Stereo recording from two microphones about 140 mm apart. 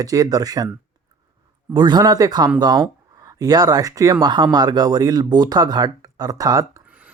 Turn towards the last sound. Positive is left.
turn(degrees=-10)  # may be behind; listen again after turning